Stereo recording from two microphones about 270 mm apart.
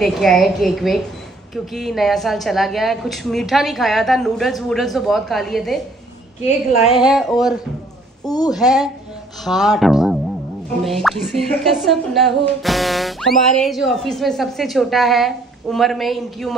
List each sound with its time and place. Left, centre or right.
0.0 s speech: centre
6.4 s a woman's voice: left
6.9 s speech: centre